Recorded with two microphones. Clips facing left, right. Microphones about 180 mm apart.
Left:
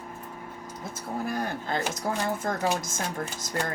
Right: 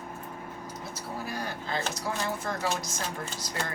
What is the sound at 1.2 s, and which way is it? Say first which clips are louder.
Speech: left 5 dB; 50° left (ahead or behind).